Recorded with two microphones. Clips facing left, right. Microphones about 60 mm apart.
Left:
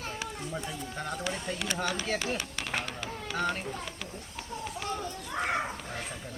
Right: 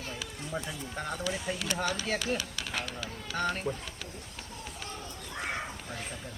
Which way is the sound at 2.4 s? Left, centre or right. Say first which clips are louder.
Left 2 dB; left.